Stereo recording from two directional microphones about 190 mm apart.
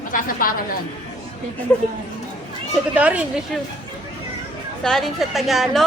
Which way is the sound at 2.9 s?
5° right (ahead or behind).